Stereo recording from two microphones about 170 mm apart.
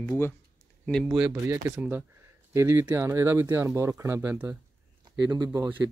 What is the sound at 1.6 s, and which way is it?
Speech, 10° right (ahead or behind).